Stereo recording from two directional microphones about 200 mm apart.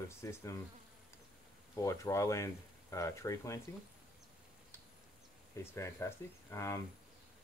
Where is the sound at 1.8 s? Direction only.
15° left (ahead or behind).